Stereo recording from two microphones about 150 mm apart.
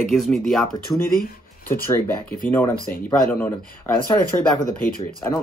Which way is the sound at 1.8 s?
15° left (ahead or behind).